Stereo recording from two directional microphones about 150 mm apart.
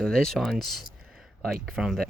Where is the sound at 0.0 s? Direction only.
5° left (ahead or behind).